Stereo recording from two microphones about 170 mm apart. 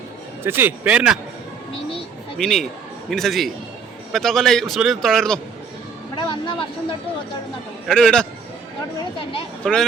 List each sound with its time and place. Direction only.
0.4 s a man's voice: 10° right (ahead or behind)
2.4 s a man's voice: centre (ahead or behind)
6.1 s speech: 30° left (ahead or behind)
7.9 s a man's voice: 5° left (ahead or behind)
9.6 s a man's voice: 5° left (ahead or behind)